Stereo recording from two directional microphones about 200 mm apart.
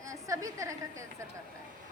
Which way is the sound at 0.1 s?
15° right (ahead or behind).